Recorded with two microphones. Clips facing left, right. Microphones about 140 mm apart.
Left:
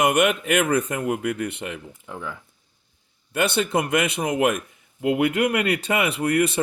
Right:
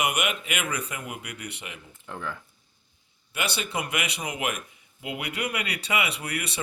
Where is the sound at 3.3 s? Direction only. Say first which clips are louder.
Left 9 dB; 55° left (ahead or behind).